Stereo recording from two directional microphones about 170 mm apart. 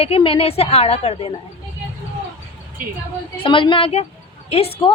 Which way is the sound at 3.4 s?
30° left (ahead or behind).